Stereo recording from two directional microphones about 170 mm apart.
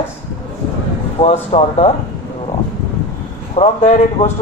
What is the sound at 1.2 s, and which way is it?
Speech, 30° left (ahead or behind).